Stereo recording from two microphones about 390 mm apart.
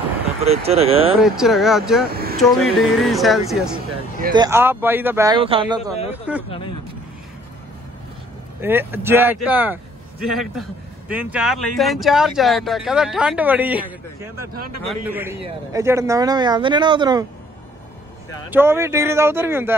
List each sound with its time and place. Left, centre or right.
0.4 s speech: centre
1.1 s a man's voice: centre
2.0 s a sound: right
2.3 s a man's voice: centre
8.5 s a man's voice: centre
18.5 s a man's voice: centre